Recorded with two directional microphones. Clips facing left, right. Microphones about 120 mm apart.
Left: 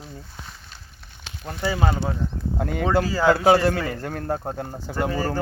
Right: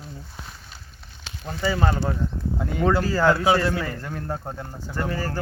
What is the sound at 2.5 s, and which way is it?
Speech, 55° left (ahead or behind).